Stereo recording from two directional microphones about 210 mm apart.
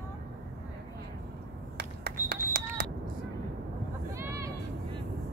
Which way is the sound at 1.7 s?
50° right (ahead or behind).